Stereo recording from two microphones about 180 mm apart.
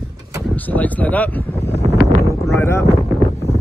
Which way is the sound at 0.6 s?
10° left (ahead or behind).